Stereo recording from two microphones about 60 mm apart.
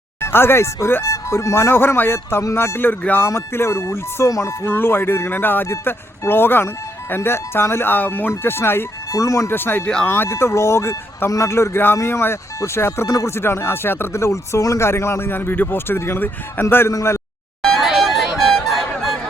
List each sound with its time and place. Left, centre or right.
0.2 s speech: left
4.3 s speech: left
4.7 s speech: left
8.3 s speech: left
9.1 s speech: left
9.5 s speech: left
9.8 s speech: centre
10.1 s speech: left
13.1 s speech: left
16.9 s speech: left
17.7 s music: centre